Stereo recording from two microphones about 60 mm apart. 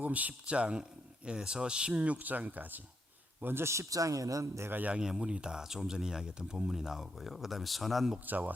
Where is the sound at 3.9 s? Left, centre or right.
Right.